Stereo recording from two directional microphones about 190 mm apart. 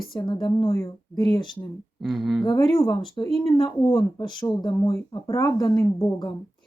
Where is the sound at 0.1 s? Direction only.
25° left (ahead or behind).